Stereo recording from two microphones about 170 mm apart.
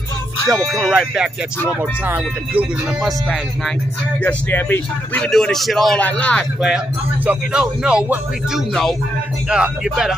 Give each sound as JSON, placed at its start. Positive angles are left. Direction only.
{"t": 0.5, "sound": "speech", "side_deg": 0}
{"t": 3.0, "sound": "speech", "side_deg": 0}